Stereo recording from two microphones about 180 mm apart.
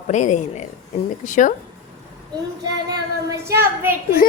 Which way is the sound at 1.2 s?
45° left (ahead or behind).